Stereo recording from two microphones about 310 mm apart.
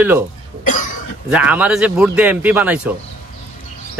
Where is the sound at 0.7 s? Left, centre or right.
Left.